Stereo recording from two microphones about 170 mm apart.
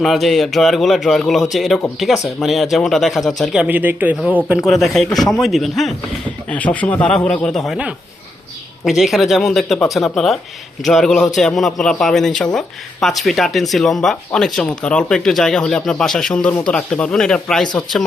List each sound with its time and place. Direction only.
0.0 s speech: centre (ahead or behind)